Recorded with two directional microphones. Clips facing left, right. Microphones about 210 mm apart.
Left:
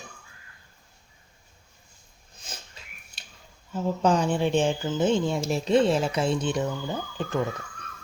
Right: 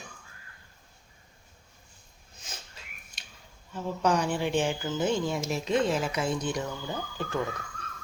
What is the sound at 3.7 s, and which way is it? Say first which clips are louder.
Speech: left 4 dB; 25° left (ahead or behind).